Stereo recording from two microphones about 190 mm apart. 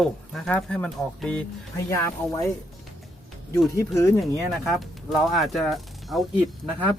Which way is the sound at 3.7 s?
15° left (ahead or behind).